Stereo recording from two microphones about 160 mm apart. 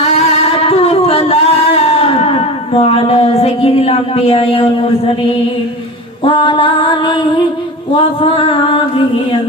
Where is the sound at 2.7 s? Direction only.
40° left (ahead or behind).